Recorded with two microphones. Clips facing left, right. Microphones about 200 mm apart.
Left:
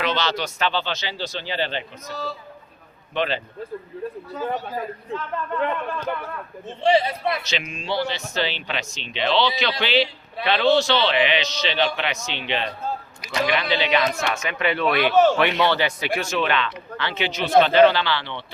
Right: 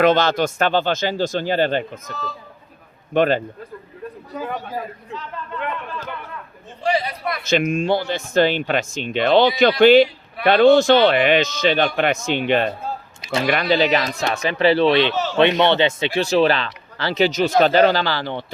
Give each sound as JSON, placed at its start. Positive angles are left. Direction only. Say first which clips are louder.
{"t": 0.0, "sound": "speech", "louder": "right 9 dB", "side_deg": -50}
{"t": 5.1, "sound": "a man's voice", "louder": "left 5 dB", "side_deg": 55}
{"t": 6.8, "sound": "a man's voice", "louder": "left 3 dB", "side_deg": 25}
{"t": 7.4, "sound": "speech", "louder": "right 11 dB", "side_deg": -50}
{"t": 15.1, "sound": "speech", "louder": "left 8 dB", "side_deg": 50}
{"t": 15.4, "sound": "speech", "louder": "right 5 dB", "side_deg": -25}